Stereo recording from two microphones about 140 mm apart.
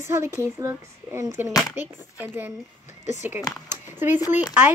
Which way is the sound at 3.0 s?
55° left (ahead or behind).